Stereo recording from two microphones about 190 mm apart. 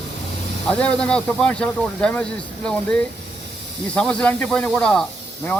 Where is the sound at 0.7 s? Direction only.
5° left (ahead or behind).